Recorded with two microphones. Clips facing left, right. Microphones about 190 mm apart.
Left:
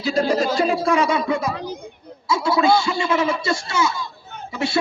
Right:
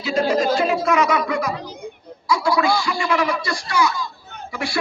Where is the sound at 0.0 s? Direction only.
35° left (ahead or behind).